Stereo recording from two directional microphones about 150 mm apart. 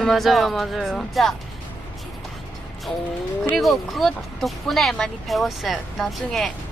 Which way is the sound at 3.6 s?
Centre (ahead or behind).